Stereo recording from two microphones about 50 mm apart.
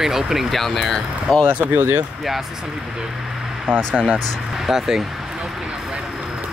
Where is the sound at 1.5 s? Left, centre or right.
Right.